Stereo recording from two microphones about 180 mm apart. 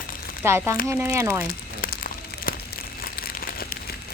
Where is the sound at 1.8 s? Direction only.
55° left (ahead or behind).